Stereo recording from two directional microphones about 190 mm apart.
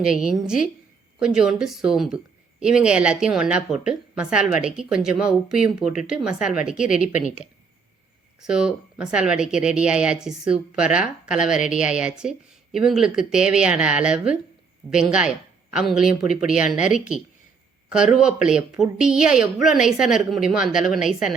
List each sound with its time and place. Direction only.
0.0 s speech: 5° right (ahead or behind)
7.1 s speech: 40° left (ahead or behind)
8.4 s speech: 5° right (ahead or behind)